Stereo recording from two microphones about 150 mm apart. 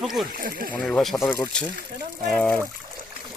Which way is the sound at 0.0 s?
Centre (ahead or behind).